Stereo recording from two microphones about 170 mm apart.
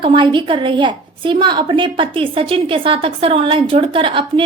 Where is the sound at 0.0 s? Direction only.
30° right (ahead or behind).